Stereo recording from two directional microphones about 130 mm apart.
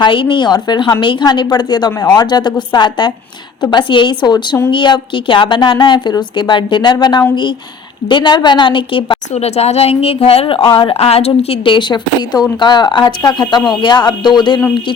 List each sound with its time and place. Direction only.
0.0 s a woman's voice: 40° left (ahead or behind)
9.3 s a woman's voice: 55° left (ahead or behind); by 14.6 s 35° left (ahead or behind)